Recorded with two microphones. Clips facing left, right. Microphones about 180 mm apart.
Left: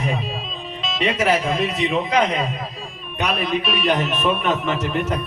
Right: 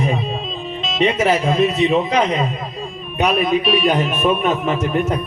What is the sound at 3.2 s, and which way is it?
Speech, 45° right (ahead or behind).